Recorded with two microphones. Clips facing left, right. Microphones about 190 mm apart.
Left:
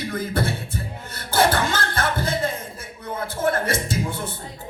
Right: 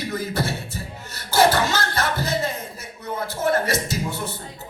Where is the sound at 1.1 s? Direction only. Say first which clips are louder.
Right 2 dB; 55° left (ahead or behind).